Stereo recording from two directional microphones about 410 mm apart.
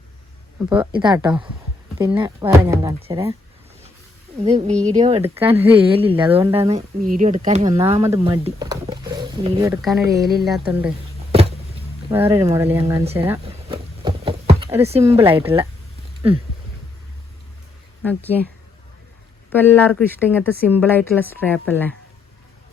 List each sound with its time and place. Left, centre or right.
0.7 s speech: centre
4.4 s speech: centre
10.6 s a sound: centre
12.0 s speech: centre
18.0 s speech: centre
19.5 s speech: centre